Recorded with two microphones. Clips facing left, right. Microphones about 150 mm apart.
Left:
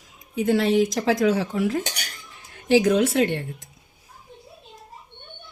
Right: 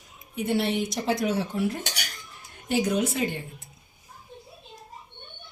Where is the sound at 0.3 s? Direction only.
90° left.